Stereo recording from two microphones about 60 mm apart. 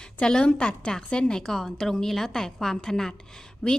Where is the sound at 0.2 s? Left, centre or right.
Centre.